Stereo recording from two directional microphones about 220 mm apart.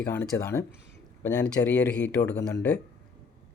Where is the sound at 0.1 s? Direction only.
10° left (ahead or behind).